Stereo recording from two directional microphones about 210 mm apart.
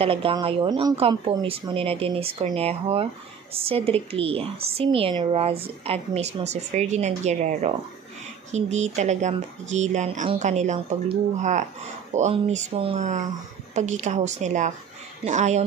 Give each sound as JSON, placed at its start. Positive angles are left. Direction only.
{"t": 0.0, "sound": "a woman's voice", "side_deg": -25}